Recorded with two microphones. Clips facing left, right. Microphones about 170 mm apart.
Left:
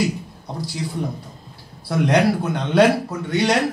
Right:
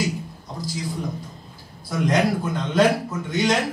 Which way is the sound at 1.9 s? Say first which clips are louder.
Left 3 dB; 70° left (ahead or behind).